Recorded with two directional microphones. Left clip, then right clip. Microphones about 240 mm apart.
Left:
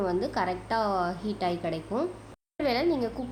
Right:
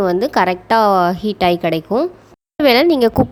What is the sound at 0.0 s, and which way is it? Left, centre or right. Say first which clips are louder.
A woman's voice: right 14 dB; right.